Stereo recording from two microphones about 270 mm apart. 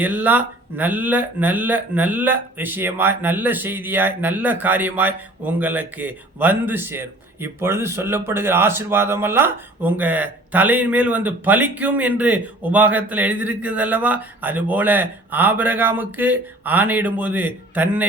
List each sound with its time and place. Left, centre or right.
0.0 s speech: centre